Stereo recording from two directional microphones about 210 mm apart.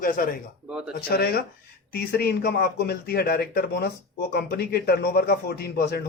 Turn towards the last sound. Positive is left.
turn(degrees=50)  # may be behind; listen again after turning